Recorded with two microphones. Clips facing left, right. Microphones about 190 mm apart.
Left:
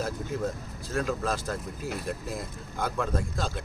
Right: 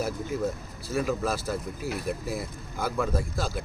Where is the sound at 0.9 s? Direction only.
5° right (ahead or behind).